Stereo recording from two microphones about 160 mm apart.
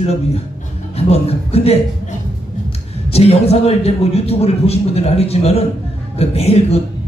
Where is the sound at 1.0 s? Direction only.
40° left (ahead or behind).